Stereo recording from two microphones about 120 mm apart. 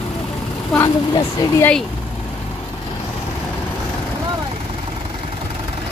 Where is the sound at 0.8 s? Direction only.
25° left (ahead or behind).